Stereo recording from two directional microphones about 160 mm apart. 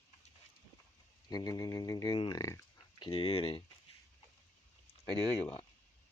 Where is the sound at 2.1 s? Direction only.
35° left (ahead or behind).